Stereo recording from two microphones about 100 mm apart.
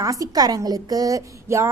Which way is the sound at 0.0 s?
35° right (ahead or behind).